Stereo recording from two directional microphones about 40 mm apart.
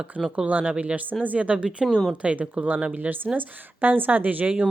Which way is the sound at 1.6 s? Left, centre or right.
Centre.